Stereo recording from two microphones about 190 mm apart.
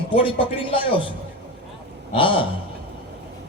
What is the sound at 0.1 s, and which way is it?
Speech, 25° left (ahead or behind).